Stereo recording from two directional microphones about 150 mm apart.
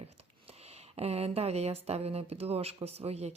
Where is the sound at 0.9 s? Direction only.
45° right (ahead or behind).